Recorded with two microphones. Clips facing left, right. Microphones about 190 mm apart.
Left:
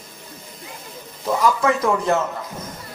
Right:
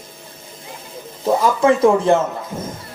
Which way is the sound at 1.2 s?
30° right (ahead or behind).